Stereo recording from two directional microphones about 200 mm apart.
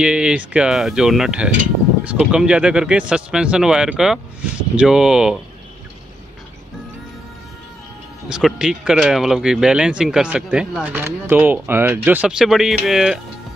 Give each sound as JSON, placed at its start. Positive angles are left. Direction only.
{"t": 0.0, "sound": "speech", "side_deg": -5}
{"t": 8.3, "sound": "speech", "side_deg": 0}